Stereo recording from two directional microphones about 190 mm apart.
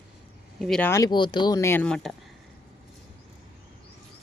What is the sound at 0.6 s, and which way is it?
Speech, 5° left (ahead or behind).